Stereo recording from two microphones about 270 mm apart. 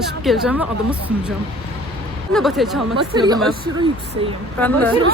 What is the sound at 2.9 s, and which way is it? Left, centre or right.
A woman's voice, centre.